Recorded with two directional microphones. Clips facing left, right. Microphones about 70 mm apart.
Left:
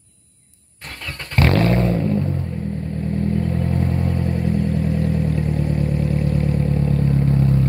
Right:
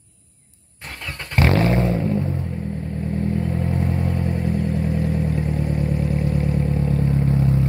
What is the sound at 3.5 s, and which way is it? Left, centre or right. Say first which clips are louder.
Vehicle: left 1 dB; right.